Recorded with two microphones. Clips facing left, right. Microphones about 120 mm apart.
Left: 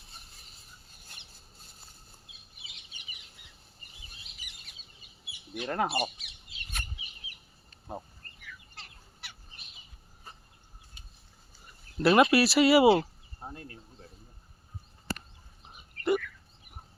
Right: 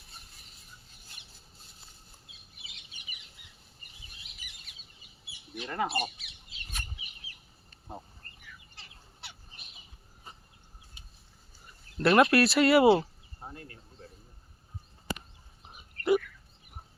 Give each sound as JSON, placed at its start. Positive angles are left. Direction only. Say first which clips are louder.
{"t": 5.5, "sound": "speech", "louder": "left 2 dB", "side_deg": 60}
{"t": 11.9, "sound": "speech", "louder": "even", "side_deg": 5}
{"t": 15.7, "sound": "a sound", "louder": "right 2 dB", "side_deg": 0}